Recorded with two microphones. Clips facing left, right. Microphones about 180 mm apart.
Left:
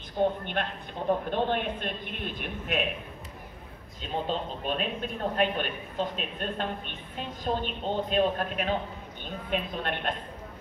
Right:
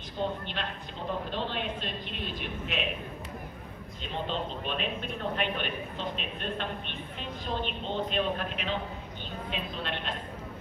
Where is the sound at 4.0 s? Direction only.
45° left (ahead or behind).